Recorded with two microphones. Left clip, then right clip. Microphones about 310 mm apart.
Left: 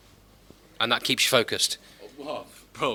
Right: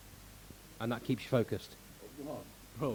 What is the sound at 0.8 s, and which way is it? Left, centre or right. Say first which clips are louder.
Speech: left 15 dB; centre.